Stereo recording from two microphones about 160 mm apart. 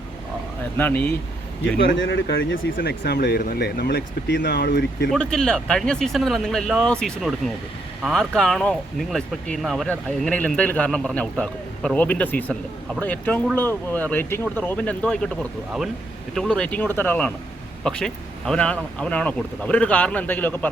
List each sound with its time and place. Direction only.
0.8 s speech: 10° left (ahead or behind)
2.8 s speech: 90° left
5.1 s speech: 5° left (ahead or behind)
16.3 s speech: 5° left (ahead or behind)